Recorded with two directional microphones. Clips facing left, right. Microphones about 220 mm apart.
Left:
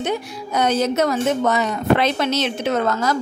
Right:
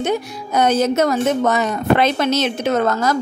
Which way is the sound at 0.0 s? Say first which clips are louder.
Right 3 dB; 50° right (ahead or behind).